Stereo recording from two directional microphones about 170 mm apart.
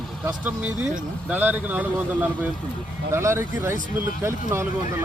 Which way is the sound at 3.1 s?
15° right (ahead or behind).